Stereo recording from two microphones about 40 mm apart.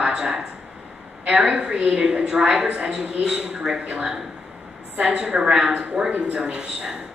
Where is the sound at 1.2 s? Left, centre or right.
Right.